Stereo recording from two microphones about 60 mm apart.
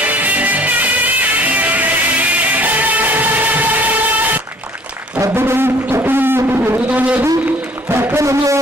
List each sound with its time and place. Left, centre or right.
0.0 s music: right
5.3 s music: right
7.9 s speech: right